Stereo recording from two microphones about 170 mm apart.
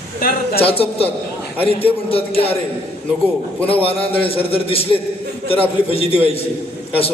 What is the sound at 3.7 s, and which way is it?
A man's voice, 35° left (ahead or behind).